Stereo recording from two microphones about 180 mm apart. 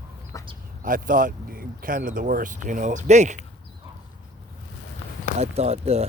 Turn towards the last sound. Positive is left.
turn(degrees=-35)  # may be behind; listen again after turning